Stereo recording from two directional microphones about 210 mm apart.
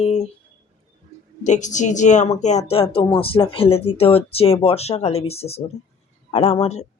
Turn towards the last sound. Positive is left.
turn(degrees=30)  # may be behind; listen again after turning